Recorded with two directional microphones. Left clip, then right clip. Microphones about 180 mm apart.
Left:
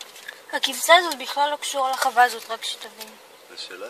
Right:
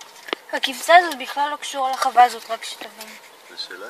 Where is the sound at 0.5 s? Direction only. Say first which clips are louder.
Right 2 dB; 20° right (ahead or behind).